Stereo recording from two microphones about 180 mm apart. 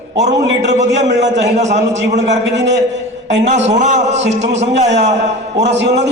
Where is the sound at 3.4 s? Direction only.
40° right (ahead or behind).